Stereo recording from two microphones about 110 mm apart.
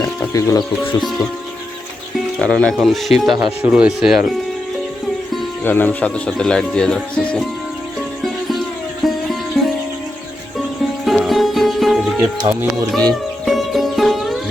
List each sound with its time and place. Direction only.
0.2 s music: 30° left (ahead or behind)
2.1 s speech: 5° left (ahead or behind)
5.6 s speech: 15° left (ahead or behind)
8.2 s music: centre (ahead or behind)
11.0 s music: centre (ahead or behind)
12.4 s speech: 40° right (ahead or behind)
12.9 s music: 5° left (ahead or behind)